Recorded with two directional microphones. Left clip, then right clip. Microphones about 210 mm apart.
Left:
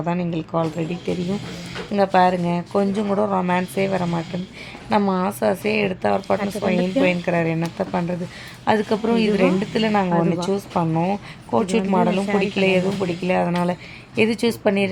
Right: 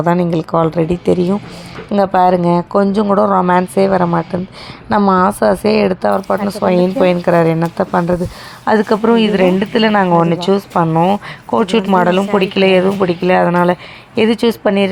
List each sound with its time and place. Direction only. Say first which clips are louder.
0.0 s a woman's voice: right 11 dB; 25° right (ahead or behind)